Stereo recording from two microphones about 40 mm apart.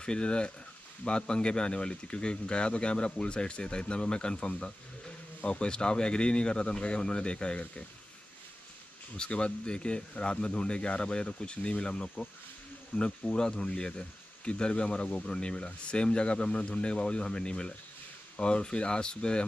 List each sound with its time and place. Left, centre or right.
0.0 s speech: left
9.1 s speech: left